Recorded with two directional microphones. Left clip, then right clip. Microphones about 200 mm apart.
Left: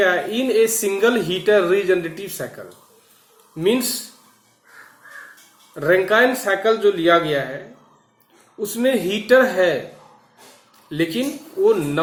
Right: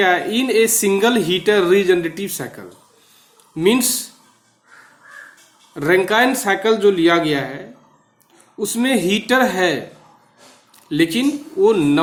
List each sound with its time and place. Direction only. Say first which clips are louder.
0.0 s speech: right 2 dB; 55° right (ahead or behind)
5.7 s speech: right 1 dB; 55° right (ahead or behind)
8.6 s speech: right 1 dB; 55° right (ahead or behind)
10.8 s speech: right 5 dB; 55° right (ahead or behind)